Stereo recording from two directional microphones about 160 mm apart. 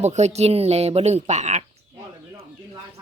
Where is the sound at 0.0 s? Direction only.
45° right (ahead or behind).